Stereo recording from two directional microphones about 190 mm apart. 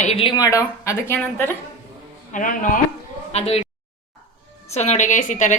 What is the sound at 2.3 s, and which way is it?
Speech, 45° left (ahead or behind).